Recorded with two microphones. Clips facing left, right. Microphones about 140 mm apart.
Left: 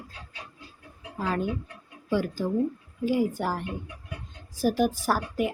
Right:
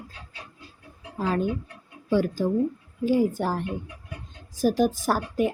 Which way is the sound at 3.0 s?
10° left (ahead or behind).